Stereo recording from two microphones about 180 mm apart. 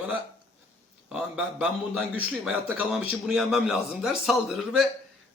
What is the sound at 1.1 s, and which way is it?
A man's voice, 5° right (ahead or behind).